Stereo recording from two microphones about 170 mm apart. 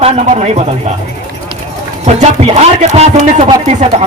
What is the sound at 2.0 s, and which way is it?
A man's voice, 40° right (ahead or behind).